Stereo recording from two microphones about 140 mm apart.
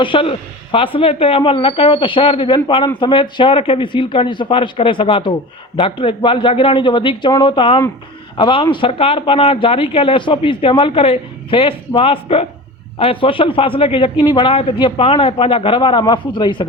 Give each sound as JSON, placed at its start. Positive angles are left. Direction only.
{"t": 0.0, "sound": "speech", "side_deg": 40}